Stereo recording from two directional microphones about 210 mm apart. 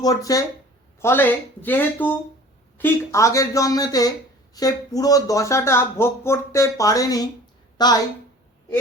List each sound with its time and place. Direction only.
0.0 s a woman's voice: 15° left (ahead or behind)